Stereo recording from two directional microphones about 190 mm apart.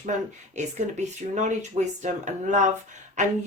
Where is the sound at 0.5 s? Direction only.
40° right (ahead or behind).